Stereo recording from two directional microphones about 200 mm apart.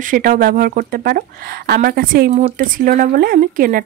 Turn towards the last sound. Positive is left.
turn(degrees=-45)  # may be behind; listen again after turning